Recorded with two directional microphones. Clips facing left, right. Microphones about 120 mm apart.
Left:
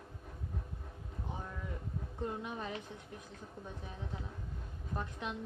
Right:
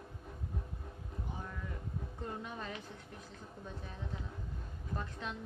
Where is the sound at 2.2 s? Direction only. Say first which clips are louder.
Left 4 dB; 15° left (ahead or behind).